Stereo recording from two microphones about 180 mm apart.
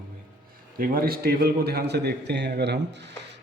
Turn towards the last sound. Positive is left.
turn(degrees=-75)  # may be behind; listen again after turning